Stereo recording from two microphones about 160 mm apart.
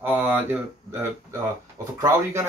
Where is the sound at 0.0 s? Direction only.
10° right (ahead or behind).